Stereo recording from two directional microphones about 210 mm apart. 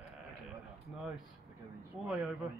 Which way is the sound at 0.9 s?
5° right (ahead or behind).